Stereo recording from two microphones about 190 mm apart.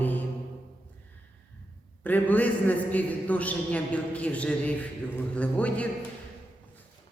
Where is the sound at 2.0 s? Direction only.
10° left (ahead or behind).